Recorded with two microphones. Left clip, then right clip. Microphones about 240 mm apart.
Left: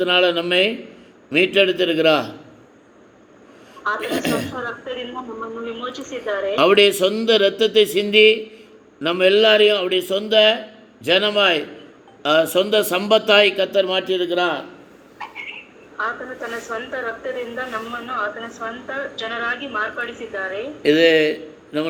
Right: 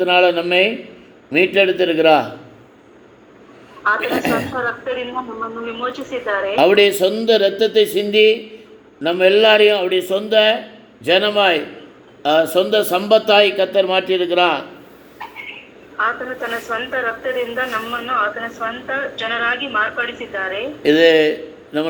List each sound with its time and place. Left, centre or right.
0.0 s a man's voice: centre
3.8 s speech: centre
6.7 s a man's voice: centre
7.1 s a man's voice: centre
15.2 s a sound: left
16.0 s speech: centre
20.8 s a man's voice: centre